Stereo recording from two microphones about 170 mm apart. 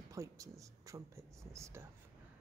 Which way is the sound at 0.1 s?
20° right (ahead or behind).